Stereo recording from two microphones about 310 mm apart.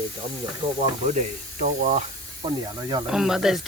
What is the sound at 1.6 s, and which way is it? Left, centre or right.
Speech, right.